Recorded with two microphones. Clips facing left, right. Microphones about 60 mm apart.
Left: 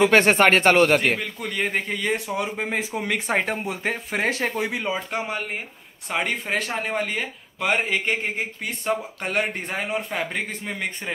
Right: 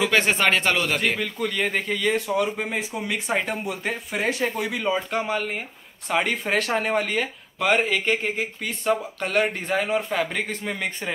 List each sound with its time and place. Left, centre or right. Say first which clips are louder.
0.0 s speech: left 4 dB; left
1.1 s speech: right 1 dB; centre
2.7 s speech: left 2 dB; left
4.8 s speech: right 3 dB; centre; by 9.5 s left
10.1 s speech: right 3 dB; centre
10.6 s speech: right 1 dB; centre